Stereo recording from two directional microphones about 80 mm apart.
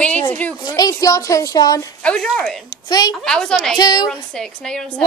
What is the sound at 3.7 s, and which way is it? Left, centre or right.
Speech, left.